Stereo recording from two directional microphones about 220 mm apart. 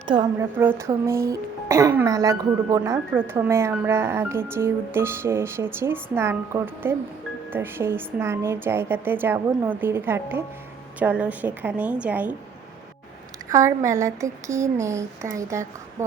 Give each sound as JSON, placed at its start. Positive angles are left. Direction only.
{"t": 0.1, "sound": "a woman's voice", "side_deg": -20}
{"t": 13.5, "sound": "speech", "side_deg": -15}